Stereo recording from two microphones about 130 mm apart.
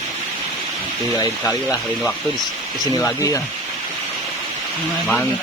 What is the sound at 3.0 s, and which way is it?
Speech, 25° left (ahead or behind).